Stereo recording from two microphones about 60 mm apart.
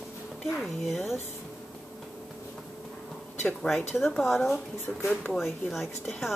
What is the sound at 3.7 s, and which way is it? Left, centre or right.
Speech, left.